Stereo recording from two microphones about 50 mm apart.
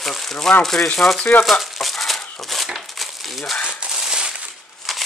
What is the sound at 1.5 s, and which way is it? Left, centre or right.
Crumpling, centre.